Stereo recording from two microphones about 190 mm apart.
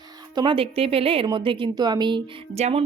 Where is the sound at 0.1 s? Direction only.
20° right (ahead or behind).